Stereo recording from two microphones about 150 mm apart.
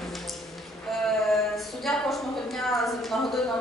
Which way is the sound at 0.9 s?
Centre (ahead or behind).